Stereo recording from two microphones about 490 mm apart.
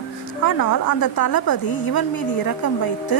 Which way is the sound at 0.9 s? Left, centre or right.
Left.